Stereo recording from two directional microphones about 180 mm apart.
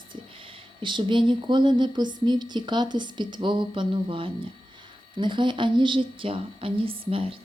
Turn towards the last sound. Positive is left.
turn(degrees=-30)  # may be behind; listen again after turning